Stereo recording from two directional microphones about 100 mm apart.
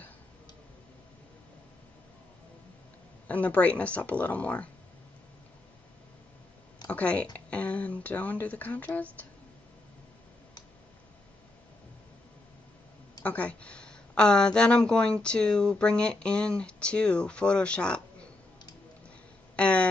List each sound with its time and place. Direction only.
3.3 s speech: 15° left (ahead or behind)
6.9 s speech: 15° left (ahead or behind)
13.2 s speech: 15° left (ahead or behind)
19.5 s a sound: 10° left (ahead or behind)